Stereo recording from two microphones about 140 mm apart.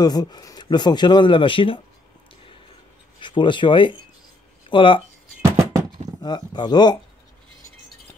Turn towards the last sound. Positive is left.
turn(degrees=30)  # may be behind; listen again after turning